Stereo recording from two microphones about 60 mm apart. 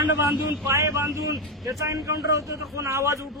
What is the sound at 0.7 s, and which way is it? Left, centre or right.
A man's voice, right.